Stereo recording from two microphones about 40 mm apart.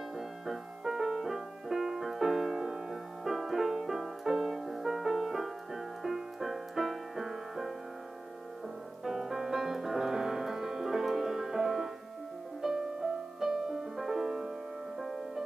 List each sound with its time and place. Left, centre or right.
0.5 s music: centre
9.0 s music: centre